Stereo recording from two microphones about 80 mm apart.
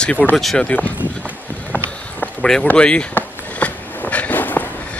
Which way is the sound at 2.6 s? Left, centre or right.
Centre.